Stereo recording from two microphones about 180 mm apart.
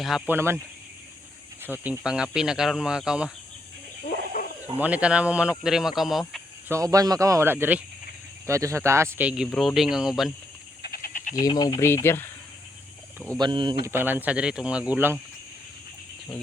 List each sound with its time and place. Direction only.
0.0 s speech: centre (ahead or behind)
0.3 s speech: 15° right (ahead or behind)
1.6 s speech: 10° right (ahead or behind)
4.0 s a sound: 50° left (ahead or behind)
4.8 s speech: 5° right (ahead or behind)
6.7 s speech: 15° right (ahead or behind)
10.8 s frog: 55° left (ahead or behind)
11.3 s speech: 20° left (ahead or behind)
13.3 s speech: 25° right (ahead or behind)
13.8 s speech: 10° right (ahead or behind)